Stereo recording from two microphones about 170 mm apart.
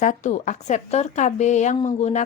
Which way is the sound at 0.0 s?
45° left (ahead or behind).